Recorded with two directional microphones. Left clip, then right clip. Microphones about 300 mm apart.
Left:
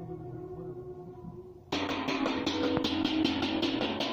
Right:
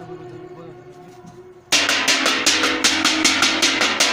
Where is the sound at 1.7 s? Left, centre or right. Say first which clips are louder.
Right 16 dB; right.